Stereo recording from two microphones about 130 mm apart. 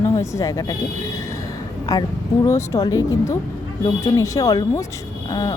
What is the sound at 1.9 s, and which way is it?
Speech, 30° left (ahead or behind).